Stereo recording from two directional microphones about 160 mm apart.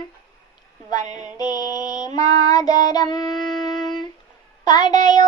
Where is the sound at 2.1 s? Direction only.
25° left (ahead or behind).